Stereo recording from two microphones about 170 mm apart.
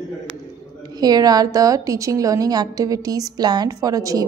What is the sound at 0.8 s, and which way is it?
A woman's voice, 25° right (ahead or behind).